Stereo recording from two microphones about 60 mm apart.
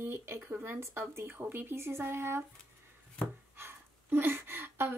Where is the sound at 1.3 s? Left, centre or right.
Right.